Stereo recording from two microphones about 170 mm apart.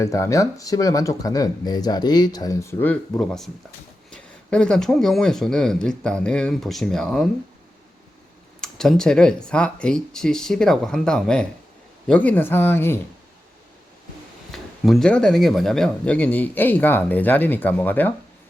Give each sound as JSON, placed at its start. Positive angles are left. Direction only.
{"t": 0.0, "sound": "speech", "side_deg": 20}
{"t": 8.6, "sound": "speech", "side_deg": 5}
{"t": 14.5, "sound": "speech", "side_deg": 0}